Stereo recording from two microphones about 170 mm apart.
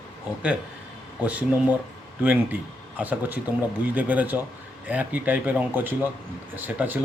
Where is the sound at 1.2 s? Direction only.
10° right (ahead or behind).